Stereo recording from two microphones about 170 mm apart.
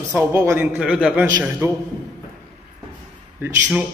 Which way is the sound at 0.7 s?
5° right (ahead or behind).